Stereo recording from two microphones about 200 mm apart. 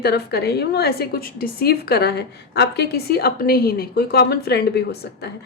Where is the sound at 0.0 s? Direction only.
55° left (ahead or behind).